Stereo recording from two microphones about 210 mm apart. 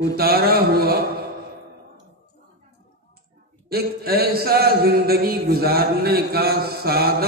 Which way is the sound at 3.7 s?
50° right (ahead or behind).